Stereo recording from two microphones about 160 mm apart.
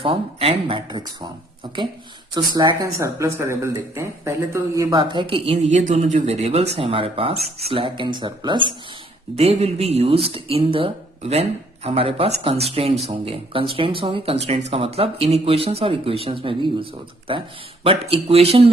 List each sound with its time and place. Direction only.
0.0 s speech: 35° right (ahead or behind)
2.3 s speech: 25° right (ahead or behind)
5.7 s speech: 50° right (ahead or behind)